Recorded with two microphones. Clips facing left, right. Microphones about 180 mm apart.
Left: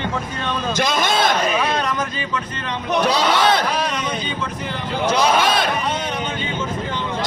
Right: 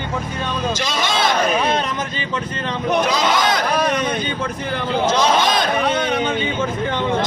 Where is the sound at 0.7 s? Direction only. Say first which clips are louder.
Left 3 dB; 55° left (ahead or behind).